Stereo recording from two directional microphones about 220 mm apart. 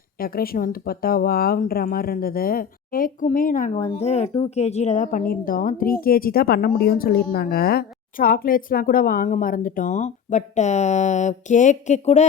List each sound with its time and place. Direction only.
0.2 s a woman's voice: 40° left (ahead or behind)